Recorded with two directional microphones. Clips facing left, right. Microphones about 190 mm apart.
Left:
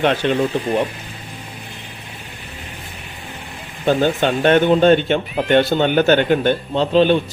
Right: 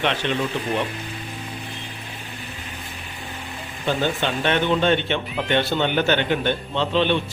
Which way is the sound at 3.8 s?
45° left (ahead or behind).